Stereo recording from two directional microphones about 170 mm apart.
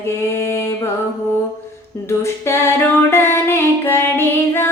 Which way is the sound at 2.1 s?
15° left (ahead or behind).